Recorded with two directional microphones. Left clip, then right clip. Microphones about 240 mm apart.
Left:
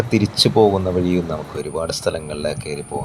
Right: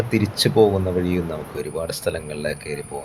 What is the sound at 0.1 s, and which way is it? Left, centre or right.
Speech, centre.